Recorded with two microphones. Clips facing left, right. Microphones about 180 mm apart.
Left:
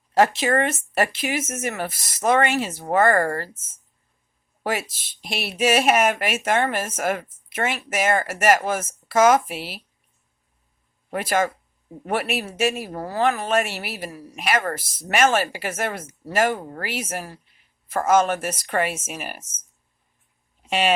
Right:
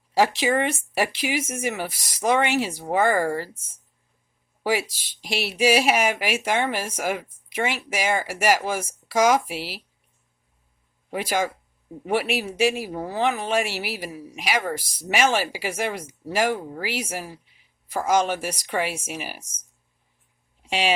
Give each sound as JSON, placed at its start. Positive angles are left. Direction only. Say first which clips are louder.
{"t": 0.2, "sound": "speech", "louder": "left 2 dB", "side_deg": -10}
{"t": 4.6, "sound": "speech", "louder": "right 2 dB", "side_deg": -10}
{"t": 11.1, "sound": "speech", "louder": "left 2 dB", "side_deg": -10}
{"t": 20.7, "sound": "speech", "louder": "left 2 dB", "side_deg": 55}